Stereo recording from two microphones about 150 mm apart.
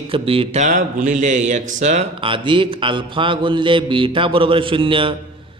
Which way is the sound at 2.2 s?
35° right (ahead or behind).